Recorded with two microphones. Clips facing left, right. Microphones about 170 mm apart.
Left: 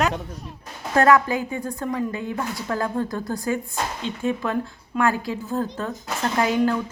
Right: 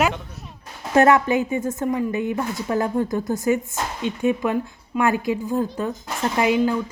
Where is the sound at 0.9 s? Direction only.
20° right (ahead or behind).